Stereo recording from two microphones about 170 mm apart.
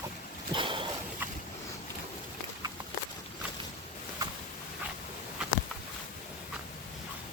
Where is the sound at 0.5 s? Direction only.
30° right (ahead or behind).